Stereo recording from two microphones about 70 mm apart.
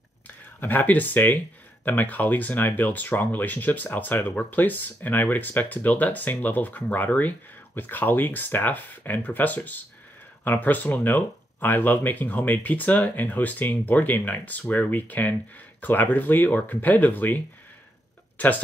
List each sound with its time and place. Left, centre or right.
0.6 s speech: left